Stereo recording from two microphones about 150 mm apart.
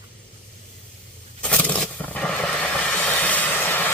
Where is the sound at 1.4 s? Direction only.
10° left (ahead or behind).